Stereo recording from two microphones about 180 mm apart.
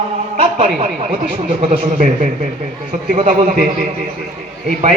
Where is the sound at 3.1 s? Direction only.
45° right (ahead or behind).